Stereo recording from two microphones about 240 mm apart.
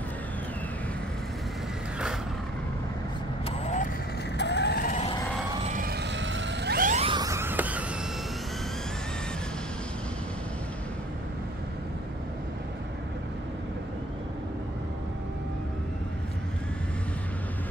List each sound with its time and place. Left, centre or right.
3.4 s vehicle: left
4.4 s vehicle: left
5.6 s music: right; by 7.8 s centre